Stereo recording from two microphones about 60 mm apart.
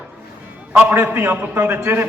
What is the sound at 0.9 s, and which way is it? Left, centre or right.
A man's voice, right.